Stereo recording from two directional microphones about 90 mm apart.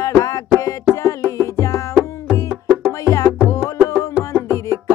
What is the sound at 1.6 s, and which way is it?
Music, 35° left (ahead or behind).